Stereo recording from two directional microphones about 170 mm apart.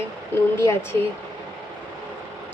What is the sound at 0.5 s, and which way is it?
Speech, 15° left (ahead or behind).